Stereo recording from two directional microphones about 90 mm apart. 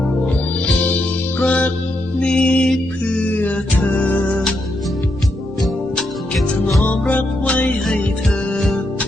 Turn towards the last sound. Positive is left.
turn(degrees=15)  # may be behind; listen again after turning